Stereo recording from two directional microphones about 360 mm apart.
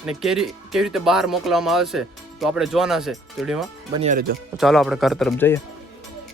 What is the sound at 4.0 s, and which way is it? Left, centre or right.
Speech, right.